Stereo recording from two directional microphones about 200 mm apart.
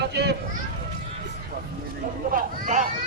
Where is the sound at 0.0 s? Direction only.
55° right (ahead or behind).